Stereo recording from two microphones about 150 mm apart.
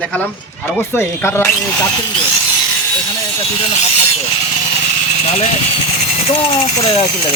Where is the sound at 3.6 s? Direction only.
45° left (ahead or behind).